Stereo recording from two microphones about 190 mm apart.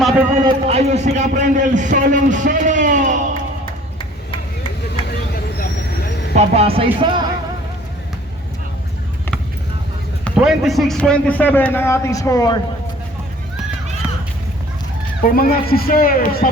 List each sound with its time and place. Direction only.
0.4 s a man's voice: 35° right (ahead or behind)
5.5 s vehicle: 55° left (ahead or behind)
6.3 s speech: 30° right (ahead or behind)
10.3 s a man's voice: 5° right (ahead or behind); by 12.5 s 20° left (ahead or behind)
15.2 s speech: 50° left (ahead or behind)